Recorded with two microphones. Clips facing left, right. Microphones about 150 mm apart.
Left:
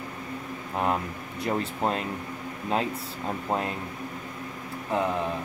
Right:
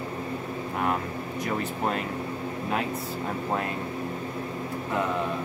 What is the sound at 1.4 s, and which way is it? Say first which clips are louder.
Speech: left 2 dB; 25° left (ahead or behind).